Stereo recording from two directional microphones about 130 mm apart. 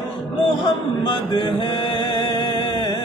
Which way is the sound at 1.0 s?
35° left (ahead or behind).